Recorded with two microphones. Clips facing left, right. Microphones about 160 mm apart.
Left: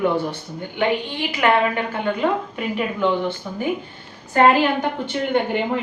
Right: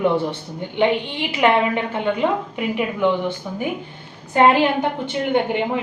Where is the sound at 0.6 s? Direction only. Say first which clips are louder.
Right 3 dB; 20° right (ahead or behind).